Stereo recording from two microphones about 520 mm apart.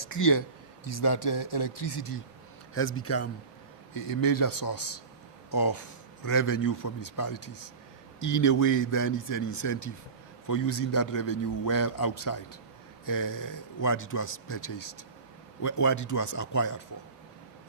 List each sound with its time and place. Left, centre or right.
0.1 s a man's voice: left
0.9 s speech: left
2.7 s a man's voice: left
3.9 s a man's voice: left